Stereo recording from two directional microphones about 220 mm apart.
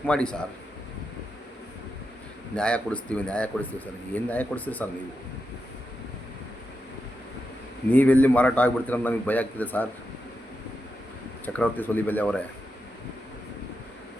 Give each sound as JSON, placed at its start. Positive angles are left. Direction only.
{"t": 0.0, "sound": "a man's voice", "side_deg": 5}
{"t": 2.6, "sound": "speech", "side_deg": 5}
{"t": 7.9, "sound": "speech", "side_deg": 5}
{"t": 11.4, "sound": "speech", "side_deg": 5}